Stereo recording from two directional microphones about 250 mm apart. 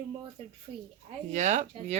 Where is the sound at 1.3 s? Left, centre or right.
Right.